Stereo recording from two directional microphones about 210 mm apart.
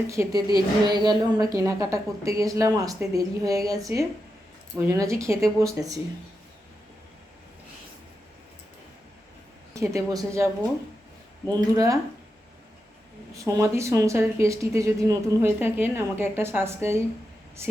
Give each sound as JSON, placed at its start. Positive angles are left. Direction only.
{"t": 0.1, "sound": "speech", "side_deg": -15}
{"t": 9.7, "sound": "speech", "side_deg": -15}
{"t": 13.5, "sound": "speech", "side_deg": -15}